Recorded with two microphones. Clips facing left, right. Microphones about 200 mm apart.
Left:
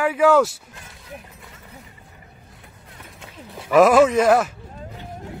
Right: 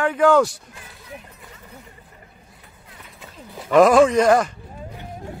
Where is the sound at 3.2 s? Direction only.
Centre (ahead or behind).